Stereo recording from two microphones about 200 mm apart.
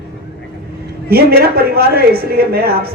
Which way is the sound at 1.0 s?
50° right (ahead or behind).